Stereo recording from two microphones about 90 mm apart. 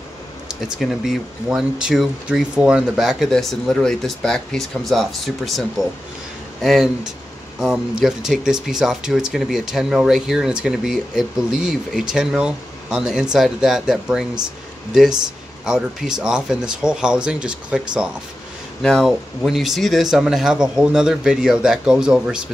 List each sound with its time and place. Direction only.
0.7 s speech: 5° right (ahead or behind)
15.6 s speech: 5° right (ahead or behind)
18.8 s speech: 5° left (ahead or behind); by 22.5 s 10° right (ahead or behind)